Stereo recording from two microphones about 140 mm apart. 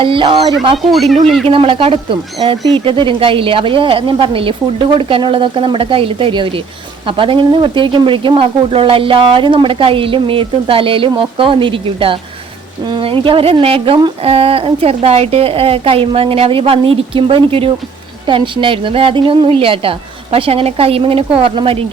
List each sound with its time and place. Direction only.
0.0 s speech: 40° right (ahead or behind)
0.8 s speech: centre (ahead or behind)
1.5 s speech: 40° right (ahead or behind)